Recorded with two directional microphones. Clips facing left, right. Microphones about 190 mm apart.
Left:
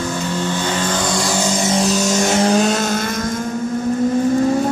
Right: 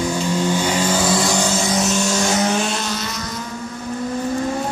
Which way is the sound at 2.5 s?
45° left (ahead or behind).